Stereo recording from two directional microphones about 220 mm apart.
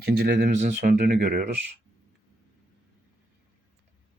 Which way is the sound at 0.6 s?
35° right (ahead or behind).